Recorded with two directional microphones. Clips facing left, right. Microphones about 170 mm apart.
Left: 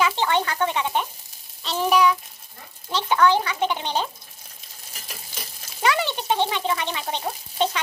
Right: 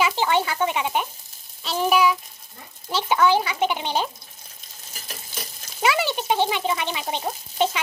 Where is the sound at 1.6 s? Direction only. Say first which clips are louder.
Even; 5° right (ahead or behind).